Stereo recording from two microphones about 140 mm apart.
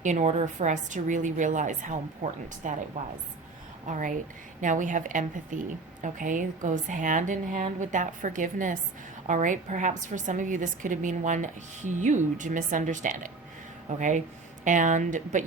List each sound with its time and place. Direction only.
0.0 s a woman's voice: 60° right (ahead or behind)
3.8 s a woman's voice: 65° right (ahead or behind)